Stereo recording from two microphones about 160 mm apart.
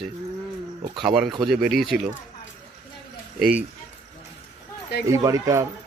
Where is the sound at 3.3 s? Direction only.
5° right (ahead or behind).